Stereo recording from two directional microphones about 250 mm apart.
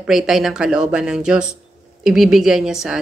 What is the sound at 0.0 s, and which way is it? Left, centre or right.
Speech, centre.